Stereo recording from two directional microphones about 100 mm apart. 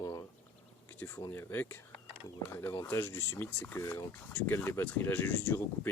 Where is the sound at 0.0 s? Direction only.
40° left (ahead or behind).